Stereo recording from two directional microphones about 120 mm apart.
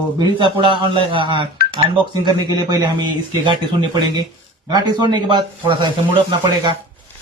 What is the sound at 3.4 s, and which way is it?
Speech, 40° right (ahead or behind).